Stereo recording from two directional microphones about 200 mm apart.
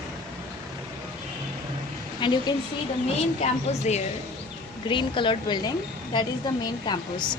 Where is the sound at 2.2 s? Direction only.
25° left (ahead or behind).